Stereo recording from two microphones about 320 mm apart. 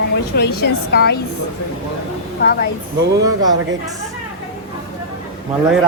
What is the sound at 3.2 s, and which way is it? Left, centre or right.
Speech, centre.